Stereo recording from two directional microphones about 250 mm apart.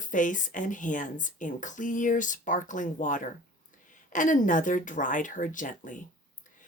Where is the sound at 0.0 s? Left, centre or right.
Left.